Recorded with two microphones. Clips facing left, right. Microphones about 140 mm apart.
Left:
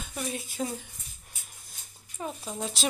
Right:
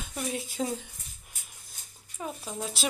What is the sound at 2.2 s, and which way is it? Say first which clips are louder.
Speech: left 1 dB; centre (ahead or behind).